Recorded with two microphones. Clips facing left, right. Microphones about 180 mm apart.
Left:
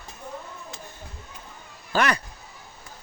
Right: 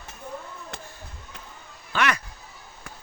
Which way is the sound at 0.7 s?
60° right (ahead or behind).